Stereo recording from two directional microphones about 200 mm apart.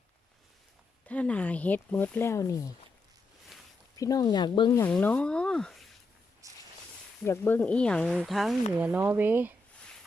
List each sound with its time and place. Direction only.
1.0 s speech: 5° left (ahead or behind)
3.9 s speech: 15° left (ahead or behind)
4.9 s speech: 5° left (ahead or behind)
6.4 s a sound: 15° right (ahead or behind)
7.3 s speech: 10° left (ahead or behind); by 9.6 s 10° right (ahead or behind)